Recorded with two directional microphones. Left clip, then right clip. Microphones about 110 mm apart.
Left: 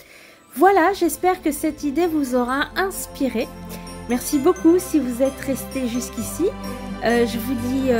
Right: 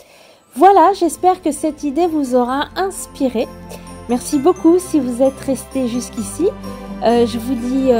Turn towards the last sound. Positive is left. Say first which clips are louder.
# right 6 dB
turn(degrees=-30)  # may be behind; listen again after turning